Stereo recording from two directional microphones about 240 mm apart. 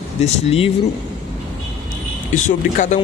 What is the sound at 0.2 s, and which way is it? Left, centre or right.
Speech, left.